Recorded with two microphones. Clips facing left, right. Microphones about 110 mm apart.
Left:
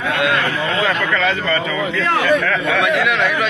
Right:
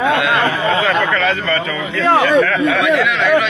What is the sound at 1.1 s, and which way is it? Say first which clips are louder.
Speech: right 1 dB; centre (ahead or behind).